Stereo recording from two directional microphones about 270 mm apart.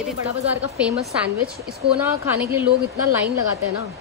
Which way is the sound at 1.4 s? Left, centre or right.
Right.